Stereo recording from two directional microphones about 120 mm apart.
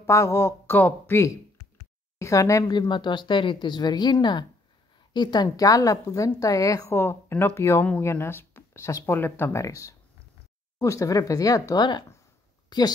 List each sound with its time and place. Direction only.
0.0 s a woman's voice: 25° left (ahead or behind)
2.9 s a woman's voice: 40° left (ahead or behind)
12.6 s a sound: 35° left (ahead or behind)